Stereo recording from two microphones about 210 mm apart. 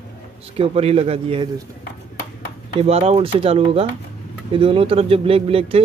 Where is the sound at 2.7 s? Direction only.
30° right (ahead or behind).